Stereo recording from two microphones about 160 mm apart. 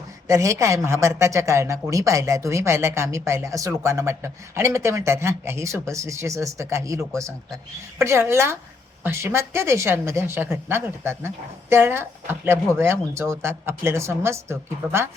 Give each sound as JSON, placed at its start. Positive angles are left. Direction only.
{"t": 0.3, "sound": "speech", "side_deg": -20}